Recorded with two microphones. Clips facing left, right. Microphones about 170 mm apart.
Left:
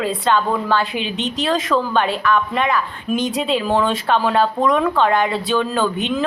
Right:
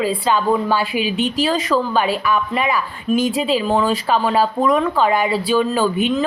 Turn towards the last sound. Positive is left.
turn(degrees=-5)  # may be behind; listen again after turning